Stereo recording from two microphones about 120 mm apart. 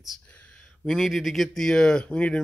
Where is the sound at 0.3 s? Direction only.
10° left (ahead or behind).